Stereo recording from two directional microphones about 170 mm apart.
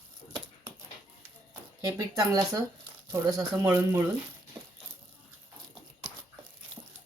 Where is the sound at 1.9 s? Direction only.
20° right (ahead or behind).